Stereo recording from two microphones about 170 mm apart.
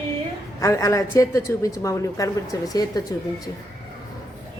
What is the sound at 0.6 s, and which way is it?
A woman's voice, 20° left (ahead or behind).